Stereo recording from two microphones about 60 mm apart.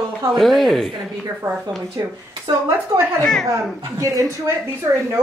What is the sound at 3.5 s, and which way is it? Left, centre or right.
A man's voice, right.